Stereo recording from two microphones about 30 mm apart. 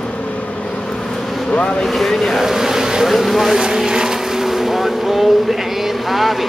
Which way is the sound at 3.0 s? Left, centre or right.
Centre.